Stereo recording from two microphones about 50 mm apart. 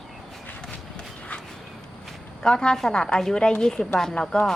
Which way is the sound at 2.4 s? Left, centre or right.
Centre.